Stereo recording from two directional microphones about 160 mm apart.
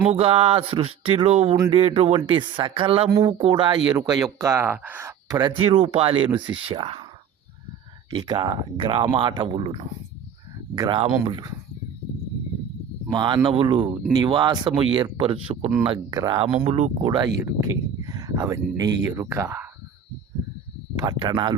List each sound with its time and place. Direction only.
0.1 s speech: 40° right (ahead or behind); by 5.1 s 15° right (ahead or behind)
5.3 s speech: 30° right (ahead or behind)
8.1 s speech: 25° right (ahead or behind)
13.1 s speech: 30° right (ahead or behind)
16.6 s speech: 40° right (ahead or behind)
17.4 s speech: 20° right (ahead or behind)
21.0 s speech: 25° right (ahead or behind)